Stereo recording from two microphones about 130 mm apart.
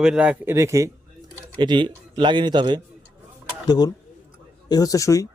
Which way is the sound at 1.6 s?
35° right (ahead or behind).